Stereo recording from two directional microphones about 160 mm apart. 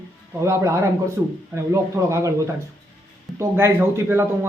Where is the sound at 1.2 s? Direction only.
10° right (ahead or behind).